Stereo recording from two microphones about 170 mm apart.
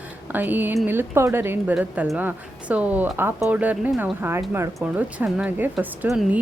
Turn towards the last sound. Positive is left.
turn(degrees=-10)  # may be behind; listen again after turning